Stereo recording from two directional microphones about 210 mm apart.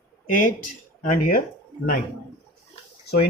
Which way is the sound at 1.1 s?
45° left (ahead or behind).